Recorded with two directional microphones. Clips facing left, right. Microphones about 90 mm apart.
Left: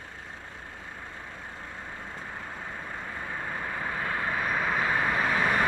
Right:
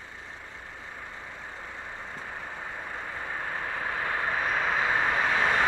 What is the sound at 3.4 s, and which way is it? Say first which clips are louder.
Vehicle: right 1 dB; 5° right (ahead or behind).